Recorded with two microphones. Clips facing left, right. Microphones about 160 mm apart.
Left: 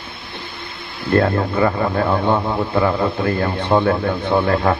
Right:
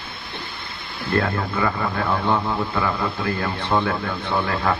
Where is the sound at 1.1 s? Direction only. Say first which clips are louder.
Left 6 dB; 35° left (ahead or behind).